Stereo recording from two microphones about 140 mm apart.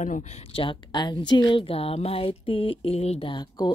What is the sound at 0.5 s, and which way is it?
A woman's voice, 40° left (ahead or behind).